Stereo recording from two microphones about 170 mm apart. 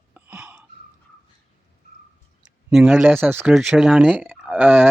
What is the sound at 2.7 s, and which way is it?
Speech, 5° right (ahead or behind).